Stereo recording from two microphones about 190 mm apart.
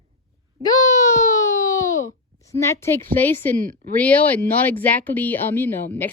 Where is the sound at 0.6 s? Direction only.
20° left (ahead or behind).